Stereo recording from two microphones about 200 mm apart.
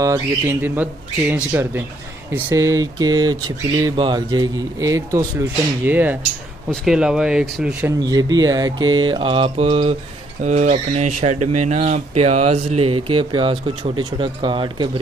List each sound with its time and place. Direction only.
0.0 s speech: 15° right (ahead or behind)
8.0 s speech: 20° right (ahead or behind)